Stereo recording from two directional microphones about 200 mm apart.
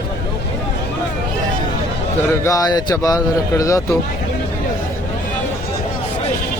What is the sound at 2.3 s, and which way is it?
Speech, 15° left (ahead or behind).